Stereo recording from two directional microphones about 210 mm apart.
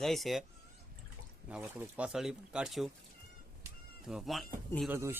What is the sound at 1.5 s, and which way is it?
Speech, 5° right (ahead or behind).